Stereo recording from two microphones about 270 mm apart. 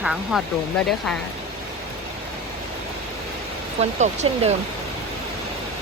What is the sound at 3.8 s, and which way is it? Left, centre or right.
Speech, right.